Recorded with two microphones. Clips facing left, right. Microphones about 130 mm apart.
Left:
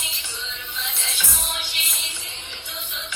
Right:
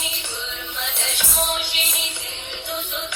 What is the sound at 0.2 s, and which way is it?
Music, 60° right (ahead or behind).